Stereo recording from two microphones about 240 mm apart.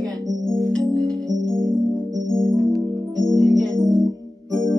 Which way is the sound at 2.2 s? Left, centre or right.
Centre.